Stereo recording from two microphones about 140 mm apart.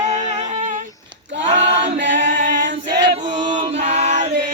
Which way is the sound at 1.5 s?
45° right (ahead or behind).